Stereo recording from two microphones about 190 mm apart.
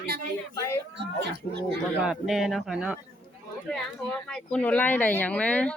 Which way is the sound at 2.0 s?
Centre (ahead or behind).